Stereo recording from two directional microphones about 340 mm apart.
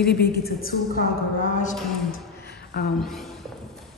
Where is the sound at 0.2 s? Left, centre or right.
Left.